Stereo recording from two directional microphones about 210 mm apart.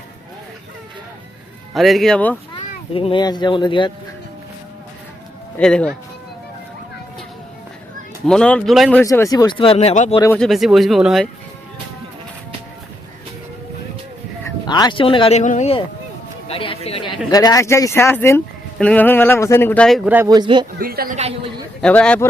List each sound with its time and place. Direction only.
1.7 s speech: centre (ahead or behind)
2.6 s a child's voice: 25° left (ahead or behind)
5.5 s speech: 5° left (ahead or behind)
8.3 s speech: 5° left (ahead or behind); by 10.2 s 30° left (ahead or behind)
10.3 s speech: centre (ahead or behind)
14.4 s speech: 20° left (ahead or behind)
20.1 s speech: 15° right (ahead or behind)
20.7 s a woman's voice: 45° right (ahead or behind)
21.8 s speech: 5° left (ahead or behind)